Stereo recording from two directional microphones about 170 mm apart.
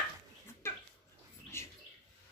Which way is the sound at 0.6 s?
15° left (ahead or behind).